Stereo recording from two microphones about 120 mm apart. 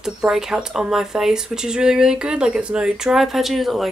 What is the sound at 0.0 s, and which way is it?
Speech, 5° right (ahead or behind).